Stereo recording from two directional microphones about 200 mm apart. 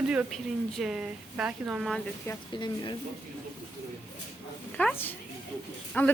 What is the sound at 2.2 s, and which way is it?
Speech, 20° left (ahead or behind).